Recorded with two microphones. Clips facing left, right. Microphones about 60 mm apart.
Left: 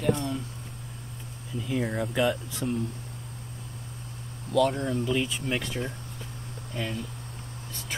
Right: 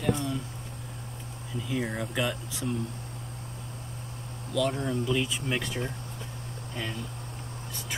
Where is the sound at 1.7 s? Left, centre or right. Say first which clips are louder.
Left 3 dB; centre.